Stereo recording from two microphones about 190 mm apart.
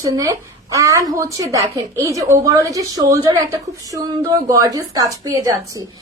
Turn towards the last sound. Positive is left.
turn(degrees=-15)  # may be behind; listen again after turning